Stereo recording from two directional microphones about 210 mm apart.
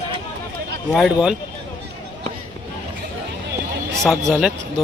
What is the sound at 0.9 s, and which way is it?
Speech, centre (ahead or behind).